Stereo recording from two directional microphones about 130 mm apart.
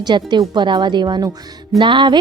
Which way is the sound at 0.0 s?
35° right (ahead or behind).